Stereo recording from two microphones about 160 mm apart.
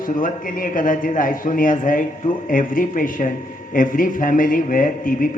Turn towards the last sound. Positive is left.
turn(degrees=60)  # may be behind; listen again after turning